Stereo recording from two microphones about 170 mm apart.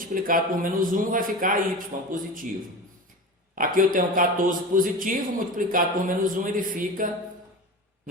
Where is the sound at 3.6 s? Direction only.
55° right (ahead or behind).